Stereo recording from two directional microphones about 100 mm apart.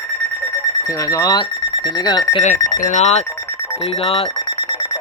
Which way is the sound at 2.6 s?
40° left (ahead or behind).